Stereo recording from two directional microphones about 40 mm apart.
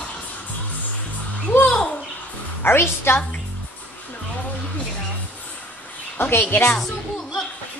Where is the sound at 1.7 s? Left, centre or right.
Left.